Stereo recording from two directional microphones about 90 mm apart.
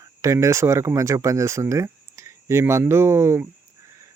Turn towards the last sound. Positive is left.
turn(degrees=-30)  # may be behind; listen again after turning